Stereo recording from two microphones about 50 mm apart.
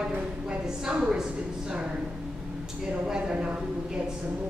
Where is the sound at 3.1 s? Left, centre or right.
Centre.